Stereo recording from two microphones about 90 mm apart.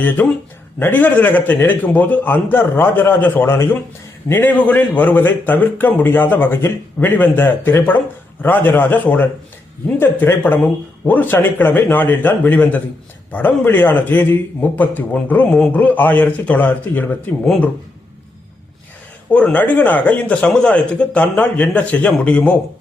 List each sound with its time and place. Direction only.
0.2 s a man's voice: 20° left (ahead or behind)
19.3 s speech: 15° left (ahead or behind)